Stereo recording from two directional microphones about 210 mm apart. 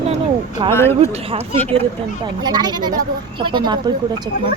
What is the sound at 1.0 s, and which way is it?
Speech, 25° right (ahead or behind).